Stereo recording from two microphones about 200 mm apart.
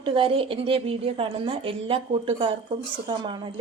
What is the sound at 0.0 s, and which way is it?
A woman's voice, 25° right (ahead or behind).